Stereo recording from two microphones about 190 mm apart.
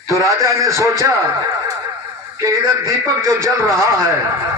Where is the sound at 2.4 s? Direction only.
15° right (ahead or behind).